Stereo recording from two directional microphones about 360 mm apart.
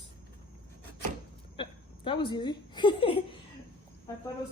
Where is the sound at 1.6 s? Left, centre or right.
Centre.